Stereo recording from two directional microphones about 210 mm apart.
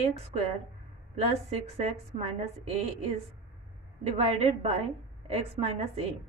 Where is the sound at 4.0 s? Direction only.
30° right (ahead or behind).